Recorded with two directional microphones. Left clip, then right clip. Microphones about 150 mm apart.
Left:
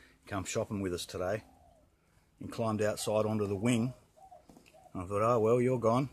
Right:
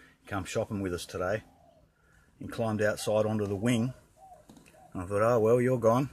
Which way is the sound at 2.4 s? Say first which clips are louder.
Right 3 dB; 10° left (ahead or behind).